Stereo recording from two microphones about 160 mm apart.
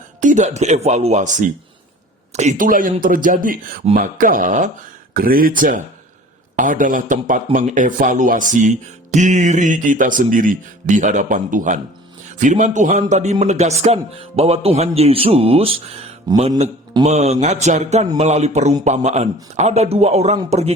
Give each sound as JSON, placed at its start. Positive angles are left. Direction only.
{"t": 0.2, "sound": "speech", "side_deg": -50}
{"t": 5.1, "sound": "a man's voice", "side_deg": -65}
{"t": 16.3, "sound": "a man's voice", "side_deg": -25}
{"t": 17.0, "sound": "a man's voice", "side_deg": -45}